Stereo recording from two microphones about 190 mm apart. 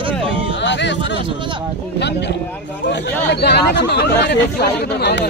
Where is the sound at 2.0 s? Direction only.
65° left (ahead or behind).